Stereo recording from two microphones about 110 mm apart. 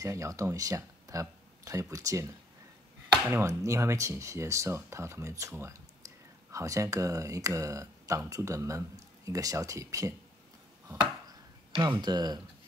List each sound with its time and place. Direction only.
0.0 s speech: 30° right (ahead or behind)
11.7 s speech: 45° right (ahead or behind)